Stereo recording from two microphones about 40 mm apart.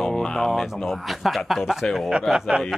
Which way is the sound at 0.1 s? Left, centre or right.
Centre.